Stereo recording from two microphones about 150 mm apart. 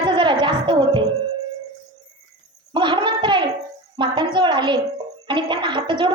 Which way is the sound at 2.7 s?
30° right (ahead or behind).